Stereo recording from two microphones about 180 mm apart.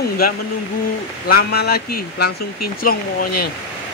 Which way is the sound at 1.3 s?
60° left (ahead or behind).